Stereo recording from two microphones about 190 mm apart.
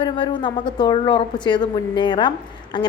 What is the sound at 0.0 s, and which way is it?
A man's voice, 25° left (ahead or behind).